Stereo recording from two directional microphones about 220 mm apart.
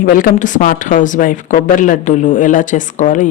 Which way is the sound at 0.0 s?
40° left (ahead or behind).